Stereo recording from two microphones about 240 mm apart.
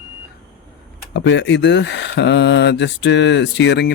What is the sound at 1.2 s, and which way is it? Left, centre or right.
Speech, left.